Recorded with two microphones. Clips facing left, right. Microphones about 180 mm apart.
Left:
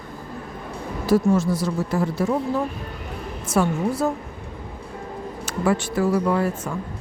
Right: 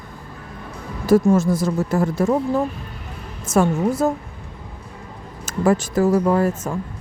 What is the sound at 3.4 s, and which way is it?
Speech, 45° right (ahead or behind).